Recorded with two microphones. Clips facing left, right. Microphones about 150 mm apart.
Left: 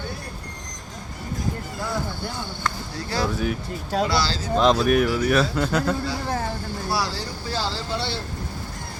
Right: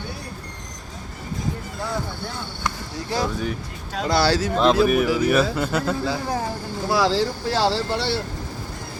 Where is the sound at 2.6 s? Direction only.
20° right (ahead or behind).